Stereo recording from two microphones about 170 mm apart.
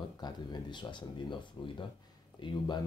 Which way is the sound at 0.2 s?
25° left (ahead or behind).